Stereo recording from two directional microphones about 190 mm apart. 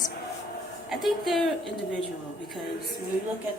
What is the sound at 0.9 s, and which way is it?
Speech, centre (ahead or behind).